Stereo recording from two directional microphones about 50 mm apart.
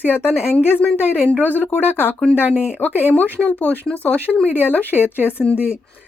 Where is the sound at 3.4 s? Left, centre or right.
Left.